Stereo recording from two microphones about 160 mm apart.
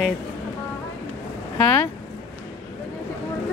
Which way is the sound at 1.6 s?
10° left (ahead or behind).